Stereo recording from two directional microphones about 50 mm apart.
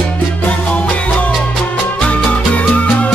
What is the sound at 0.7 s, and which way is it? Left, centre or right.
Music, left.